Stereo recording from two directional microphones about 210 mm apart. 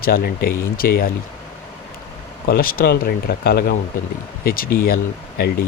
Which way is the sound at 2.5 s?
45° left (ahead or behind).